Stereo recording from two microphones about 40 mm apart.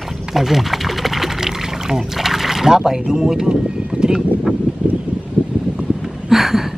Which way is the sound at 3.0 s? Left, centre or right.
Centre.